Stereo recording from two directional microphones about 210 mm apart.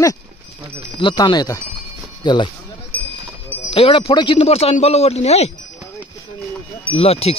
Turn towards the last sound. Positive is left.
turn(degrees=30)  # may be behind; listen again after turning